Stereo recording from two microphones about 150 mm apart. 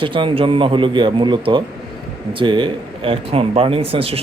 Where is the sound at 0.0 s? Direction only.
35° right (ahead or behind).